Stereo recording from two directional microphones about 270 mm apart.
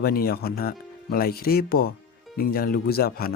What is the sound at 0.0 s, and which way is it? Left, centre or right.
Speech, left.